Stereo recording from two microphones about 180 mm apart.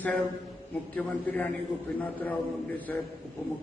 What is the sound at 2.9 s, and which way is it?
Speech, 10° left (ahead or behind).